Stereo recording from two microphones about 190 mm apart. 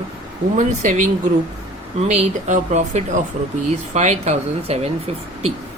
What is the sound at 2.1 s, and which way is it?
Speech, 40° right (ahead or behind).